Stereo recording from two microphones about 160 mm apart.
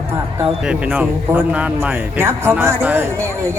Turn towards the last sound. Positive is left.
turn(degrees=-15)  # may be behind; listen again after turning